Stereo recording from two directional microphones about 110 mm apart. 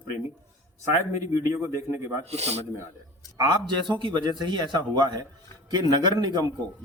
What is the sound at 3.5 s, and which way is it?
A man's voice, 45° right (ahead or behind).